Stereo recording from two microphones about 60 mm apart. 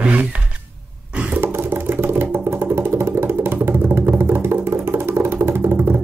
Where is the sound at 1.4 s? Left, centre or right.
Right.